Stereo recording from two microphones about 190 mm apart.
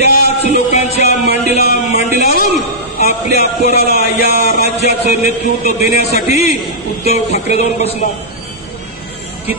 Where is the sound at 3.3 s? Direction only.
60° right (ahead or behind).